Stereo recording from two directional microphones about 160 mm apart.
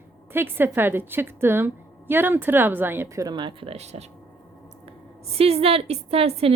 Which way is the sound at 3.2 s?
30° right (ahead or behind).